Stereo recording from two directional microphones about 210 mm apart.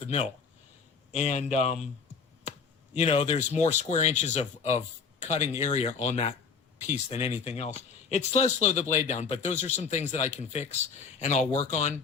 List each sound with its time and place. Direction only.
1.1 s speech: 35° left (ahead or behind)